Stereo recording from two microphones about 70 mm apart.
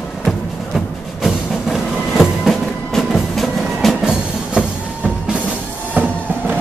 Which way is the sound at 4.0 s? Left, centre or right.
Centre.